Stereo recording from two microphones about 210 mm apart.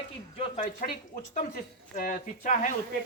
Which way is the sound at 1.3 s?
40° left (ahead or behind).